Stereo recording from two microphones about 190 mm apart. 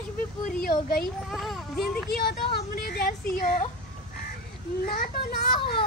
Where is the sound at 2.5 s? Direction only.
55° left (ahead or behind).